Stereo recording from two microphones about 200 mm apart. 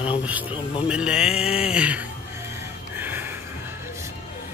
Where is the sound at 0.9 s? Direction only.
5° right (ahead or behind).